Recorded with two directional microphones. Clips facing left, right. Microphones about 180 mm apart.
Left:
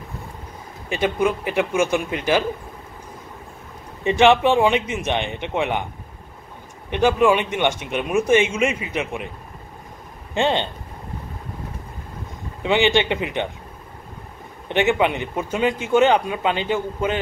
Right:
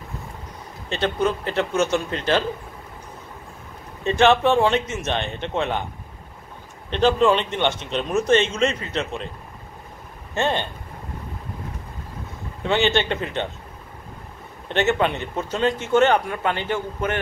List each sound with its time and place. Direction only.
0.8 s speech: 10° left (ahead or behind)
4.0 s speech: 15° left (ahead or behind)
6.9 s speech: 10° left (ahead or behind)
10.3 s speech: 15° left (ahead or behind)
12.6 s speech: 15° left (ahead or behind)
14.7 s speech: 15° left (ahead or behind)